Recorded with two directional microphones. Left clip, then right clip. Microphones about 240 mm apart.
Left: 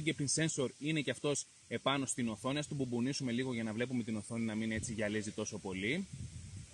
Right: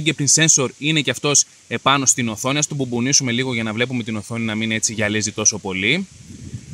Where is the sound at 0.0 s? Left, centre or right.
Right.